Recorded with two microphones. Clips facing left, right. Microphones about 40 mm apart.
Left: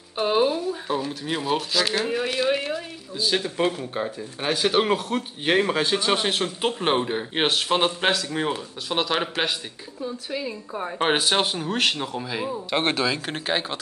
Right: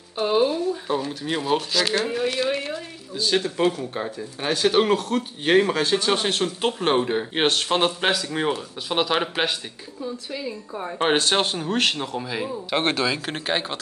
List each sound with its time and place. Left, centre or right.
0.2 s speech: centre
10.3 s speech: centre